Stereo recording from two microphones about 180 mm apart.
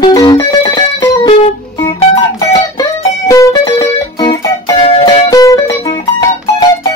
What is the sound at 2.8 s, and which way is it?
Music, 20° left (ahead or behind).